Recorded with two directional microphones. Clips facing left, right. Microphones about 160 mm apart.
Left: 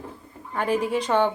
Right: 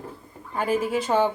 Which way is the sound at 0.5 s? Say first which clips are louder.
Even; 5° right (ahead or behind).